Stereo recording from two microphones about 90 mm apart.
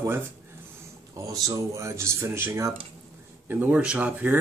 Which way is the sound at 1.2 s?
40° right (ahead or behind).